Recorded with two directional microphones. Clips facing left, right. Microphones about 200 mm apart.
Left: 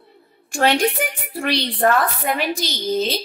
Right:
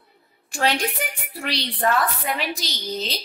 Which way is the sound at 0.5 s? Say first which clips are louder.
Left 5 dB; 50° left (ahead or behind).